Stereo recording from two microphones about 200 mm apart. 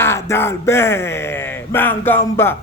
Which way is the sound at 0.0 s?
15° left (ahead or behind).